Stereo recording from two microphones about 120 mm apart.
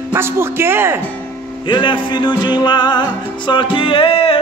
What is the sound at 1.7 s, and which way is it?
Music, 40° left (ahead or behind).